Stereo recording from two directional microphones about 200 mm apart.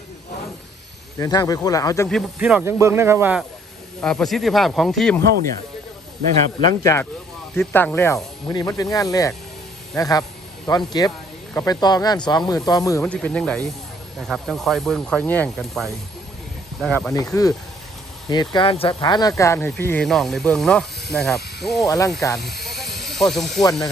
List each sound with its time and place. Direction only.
1.2 s speech: 20° left (ahead or behind)
2.0 s speech: centre (ahead or behind)
4.0 s speech: 5° left (ahead or behind)
6.6 s speech: 20° left (ahead or behind)
13.0 s speech: 5° left (ahead or behind)
18.3 s speech: 20° left (ahead or behind); by 21.8 s centre (ahead or behind)
21.8 s speech: 15° left (ahead or behind)
22.4 s speech: 55° left (ahead or behind)
23.0 s speech: centre (ahead or behind)